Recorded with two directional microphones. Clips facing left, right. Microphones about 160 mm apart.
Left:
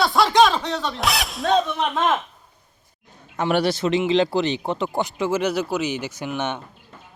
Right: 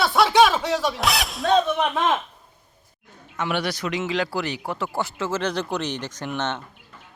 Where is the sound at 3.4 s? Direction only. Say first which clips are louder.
Left 5 dB; 35° left (ahead or behind); by 6.6 s 10° left (ahead or behind).